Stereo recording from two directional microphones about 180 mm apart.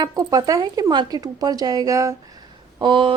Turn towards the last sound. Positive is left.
turn(degrees=-25)  # may be behind; listen again after turning